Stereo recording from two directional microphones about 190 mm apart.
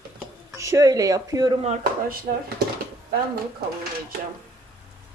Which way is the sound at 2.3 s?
45° right (ahead or behind).